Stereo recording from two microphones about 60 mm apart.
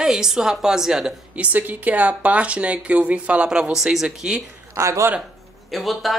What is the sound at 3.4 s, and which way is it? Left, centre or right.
Speech, centre.